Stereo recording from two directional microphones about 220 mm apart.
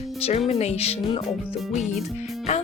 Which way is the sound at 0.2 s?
30° left (ahead or behind).